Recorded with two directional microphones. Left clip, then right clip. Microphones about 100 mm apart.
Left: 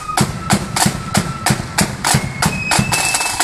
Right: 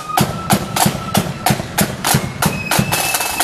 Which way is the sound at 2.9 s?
60° right (ahead or behind).